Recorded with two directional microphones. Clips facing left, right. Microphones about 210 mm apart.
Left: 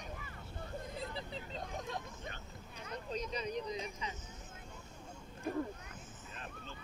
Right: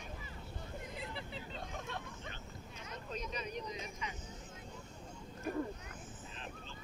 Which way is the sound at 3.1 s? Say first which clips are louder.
Left 3 dB; 35° left (ahead or behind).